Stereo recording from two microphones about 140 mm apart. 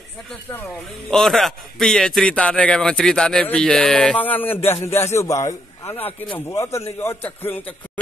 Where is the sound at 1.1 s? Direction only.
Centre (ahead or behind).